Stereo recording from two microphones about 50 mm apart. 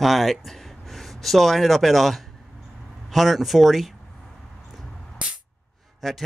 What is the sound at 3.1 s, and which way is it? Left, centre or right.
Speech, centre.